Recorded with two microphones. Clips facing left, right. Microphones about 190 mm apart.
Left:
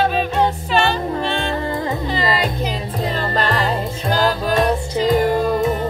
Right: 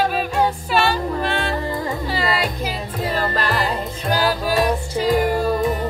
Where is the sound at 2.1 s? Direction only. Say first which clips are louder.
Left 1 dB; 5° right (ahead or behind).